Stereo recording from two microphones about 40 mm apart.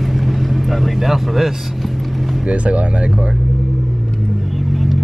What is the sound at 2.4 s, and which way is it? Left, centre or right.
Vehicle, right.